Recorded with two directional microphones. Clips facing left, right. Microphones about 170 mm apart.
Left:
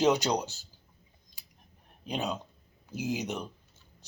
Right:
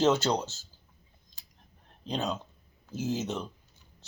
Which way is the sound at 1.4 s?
15° left (ahead or behind).